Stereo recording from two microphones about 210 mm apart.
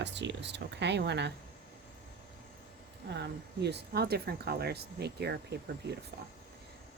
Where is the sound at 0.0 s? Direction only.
55° right (ahead or behind).